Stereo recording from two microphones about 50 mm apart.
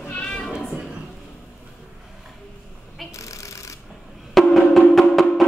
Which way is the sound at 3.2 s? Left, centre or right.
Left.